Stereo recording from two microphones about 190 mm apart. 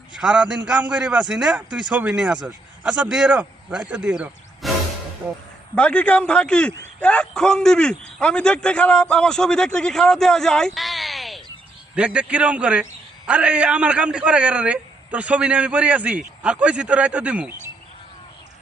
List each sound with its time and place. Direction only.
0.2 s speech: 5° right (ahead or behind)
5.7 s speech: 5° left (ahead or behind)
10.8 s a sound: centre (ahead or behind)
11.9 s a man's voice: 5° right (ahead or behind)